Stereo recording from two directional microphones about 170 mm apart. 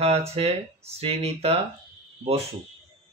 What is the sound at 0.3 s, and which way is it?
Speech, 35° right (ahead or behind).